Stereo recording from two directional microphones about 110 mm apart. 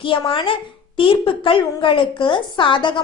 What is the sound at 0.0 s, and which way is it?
A woman's voice, 50° left (ahead or behind).